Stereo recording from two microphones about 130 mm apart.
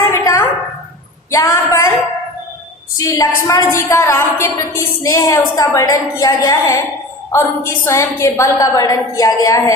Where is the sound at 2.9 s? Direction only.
25° left (ahead or behind).